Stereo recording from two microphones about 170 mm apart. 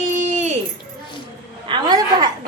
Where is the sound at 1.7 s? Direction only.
25° right (ahead or behind).